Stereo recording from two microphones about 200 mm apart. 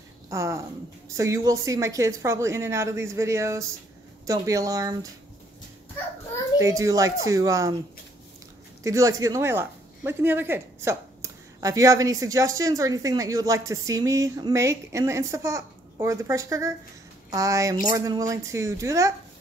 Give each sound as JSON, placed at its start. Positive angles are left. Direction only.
{"t": 0.3, "sound": "speech", "side_deg": -15}
{"t": 6.6, "sound": "speech", "side_deg": -15}
{"t": 8.8, "sound": "speech", "side_deg": -15}